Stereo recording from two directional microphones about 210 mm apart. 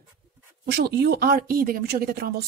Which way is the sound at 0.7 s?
50° right (ahead or behind).